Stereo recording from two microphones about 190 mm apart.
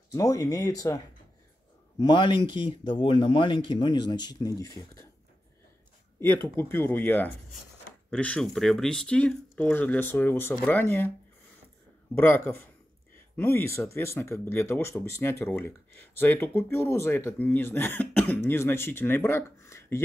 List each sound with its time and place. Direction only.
0.1 s speech: 15° left (ahead or behind)
6.1 s speech: 10° left (ahead or behind)
12.2 s speech: 10° left (ahead or behind)